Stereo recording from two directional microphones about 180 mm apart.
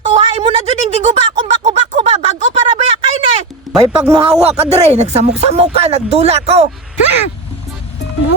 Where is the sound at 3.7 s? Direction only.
Centre (ahead or behind).